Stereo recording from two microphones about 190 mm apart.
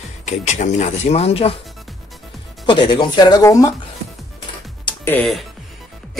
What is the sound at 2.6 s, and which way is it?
Speech, 25° left (ahead or behind).